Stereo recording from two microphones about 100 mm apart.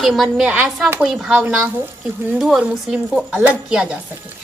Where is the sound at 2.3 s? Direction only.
5° right (ahead or behind).